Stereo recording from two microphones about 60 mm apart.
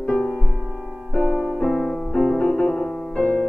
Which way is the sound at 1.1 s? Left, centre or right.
Left.